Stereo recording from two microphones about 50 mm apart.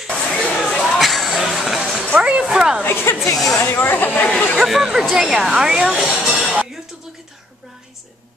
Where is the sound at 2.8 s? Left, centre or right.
Left.